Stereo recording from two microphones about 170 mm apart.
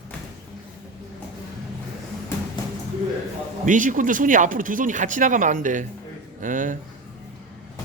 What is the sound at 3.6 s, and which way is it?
Speech, 50° right (ahead or behind).